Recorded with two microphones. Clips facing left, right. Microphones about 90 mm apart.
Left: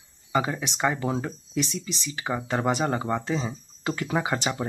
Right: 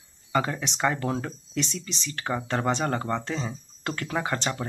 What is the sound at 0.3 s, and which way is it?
Speech, 5° left (ahead or behind).